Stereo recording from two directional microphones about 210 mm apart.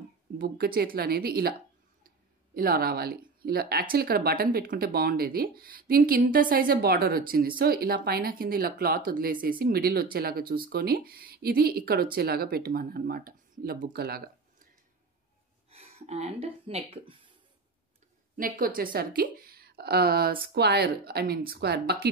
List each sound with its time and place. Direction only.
0.4 s speech: 45° right (ahead or behind)
15.7 s speech: 30° right (ahead or behind)
18.3 s a woman's voice: 40° right (ahead or behind)